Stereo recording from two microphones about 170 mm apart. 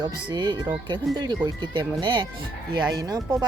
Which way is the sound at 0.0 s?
25° right (ahead or behind).